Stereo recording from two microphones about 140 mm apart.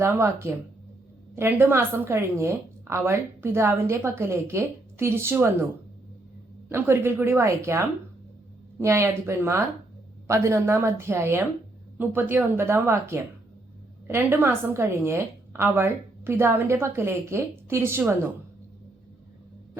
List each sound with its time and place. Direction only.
0.0 s a woman's voice: 20° right (ahead or behind)
6.7 s a woman's voice: 15° right (ahead or behind)